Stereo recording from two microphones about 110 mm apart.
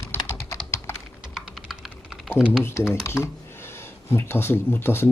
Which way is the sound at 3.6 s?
20° left (ahead or behind).